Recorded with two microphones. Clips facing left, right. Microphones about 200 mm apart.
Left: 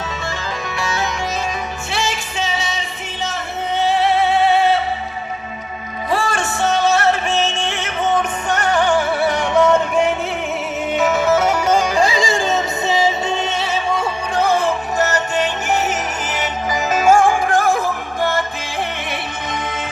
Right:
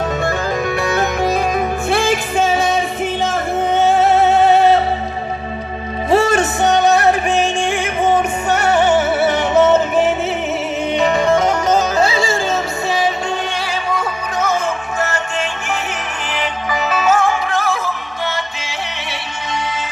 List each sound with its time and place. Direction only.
0.2 s music: 55° right (ahead or behind)
6.1 s music: 25° right (ahead or behind); by 13.1 s 20° left (ahead or behind)
13.9 s music: 30° left (ahead or behind); by 18.8 s 50° left (ahead or behind)